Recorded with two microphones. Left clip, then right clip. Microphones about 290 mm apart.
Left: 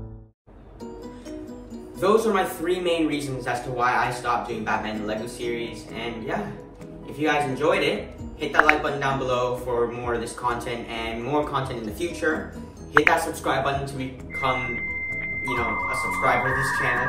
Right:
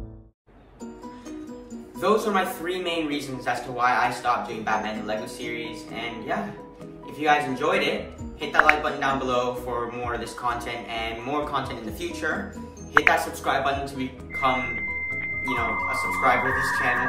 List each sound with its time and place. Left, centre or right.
2.0 s a man's voice: centre
7.5 s a man's voice: centre